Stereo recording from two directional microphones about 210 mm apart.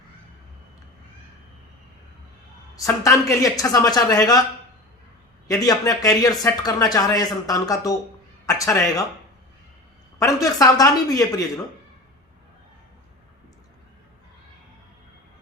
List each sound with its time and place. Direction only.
2.8 s speech: 15° left (ahead or behind)
5.5 s speech: 15° left (ahead or behind)
10.2 s speech: 15° left (ahead or behind)